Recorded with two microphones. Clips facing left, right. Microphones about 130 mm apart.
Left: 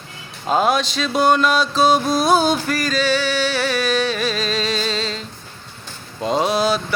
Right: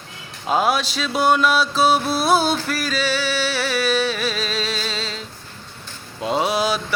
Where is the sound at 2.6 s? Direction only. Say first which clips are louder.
Left 3 dB; 5° right (ahead or behind).